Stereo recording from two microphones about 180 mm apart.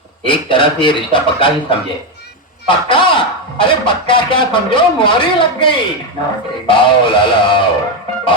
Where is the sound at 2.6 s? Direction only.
30° left (ahead or behind).